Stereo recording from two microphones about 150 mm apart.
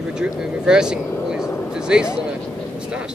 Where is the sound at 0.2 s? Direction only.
5° right (ahead or behind).